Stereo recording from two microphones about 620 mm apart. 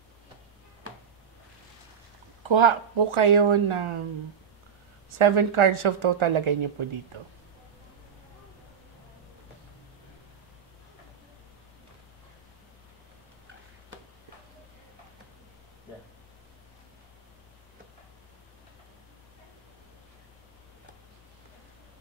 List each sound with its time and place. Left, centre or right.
2.4 s a woman's voice: right
5.2 s a woman's voice: right